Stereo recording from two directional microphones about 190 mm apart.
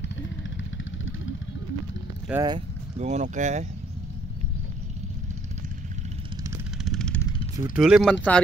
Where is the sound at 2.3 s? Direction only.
5° right (ahead or behind).